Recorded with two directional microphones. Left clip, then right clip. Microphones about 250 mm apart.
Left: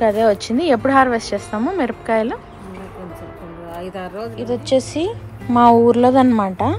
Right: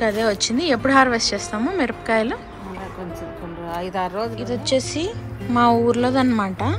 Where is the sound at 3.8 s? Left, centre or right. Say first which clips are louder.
Right 4 dB; right.